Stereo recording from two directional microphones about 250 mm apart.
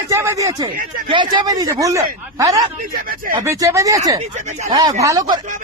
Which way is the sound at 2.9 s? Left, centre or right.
Right.